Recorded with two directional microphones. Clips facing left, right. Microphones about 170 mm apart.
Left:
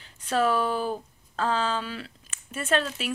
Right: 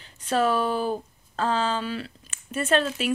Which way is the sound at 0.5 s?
15° right (ahead or behind).